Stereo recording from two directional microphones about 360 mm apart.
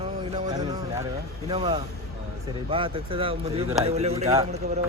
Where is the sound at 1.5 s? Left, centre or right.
Centre.